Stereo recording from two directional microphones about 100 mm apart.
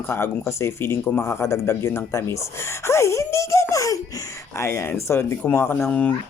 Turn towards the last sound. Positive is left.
turn(degrees=20)  # may be behind; listen again after turning